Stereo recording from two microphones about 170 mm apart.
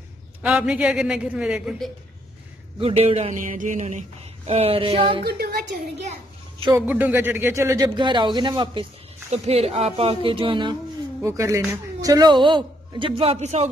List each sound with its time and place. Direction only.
0.4 s a man's voice: 5° right (ahead or behind)
2.8 s speech: 35° right (ahead or behind)
3.4 s a sound: 50° right (ahead or behind)
4.5 s speech: 35° right (ahead or behind)
6.7 s speech: 10° right (ahead or behind); by 8.8 s 25° right (ahead or behind)
9.3 s speech: 35° right (ahead or behind)
11.1 s speech: 15° right (ahead or behind); by 13.7 s 40° right (ahead or behind)